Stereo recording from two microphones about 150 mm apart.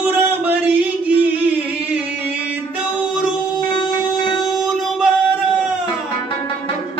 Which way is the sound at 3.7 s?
35° left (ahead or behind).